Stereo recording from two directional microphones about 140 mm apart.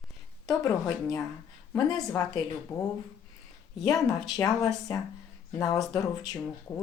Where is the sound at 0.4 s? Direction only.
20° left (ahead or behind).